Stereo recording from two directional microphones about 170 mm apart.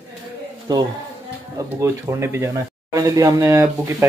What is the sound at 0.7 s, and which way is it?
A man's voice, 25° right (ahead or behind).